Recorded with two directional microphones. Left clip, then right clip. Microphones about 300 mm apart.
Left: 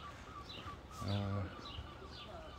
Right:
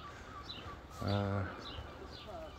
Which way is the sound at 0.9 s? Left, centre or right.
Right.